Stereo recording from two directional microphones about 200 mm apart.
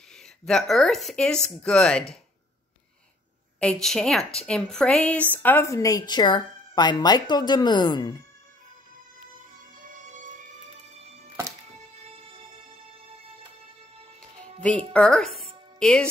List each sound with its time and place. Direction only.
0.5 s speech: centre (ahead or behind)
3.5 s a woman's voice: 5° left (ahead or behind); by 8.2 s 20° left (ahead or behind)
9.8 s music: 40° right (ahead or behind)
14.9 s a woman's voice: 5° left (ahead or behind)